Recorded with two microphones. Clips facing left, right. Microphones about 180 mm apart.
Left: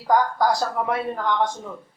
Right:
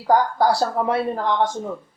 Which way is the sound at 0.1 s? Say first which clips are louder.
Right 2 dB; 30° right (ahead or behind).